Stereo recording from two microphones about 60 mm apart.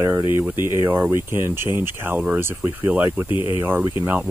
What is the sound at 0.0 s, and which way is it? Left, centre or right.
Speech, right.